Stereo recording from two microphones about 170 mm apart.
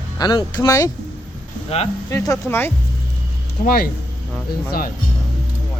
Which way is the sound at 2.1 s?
15° left (ahead or behind).